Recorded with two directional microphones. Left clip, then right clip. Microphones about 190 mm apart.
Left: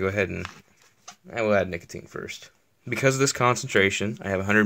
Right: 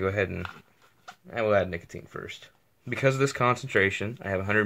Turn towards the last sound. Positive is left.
turn(degrees=45)  # may be behind; listen again after turning